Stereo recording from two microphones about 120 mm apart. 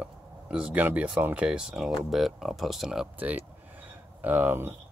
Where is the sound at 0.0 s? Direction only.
10° right (ahead or behind).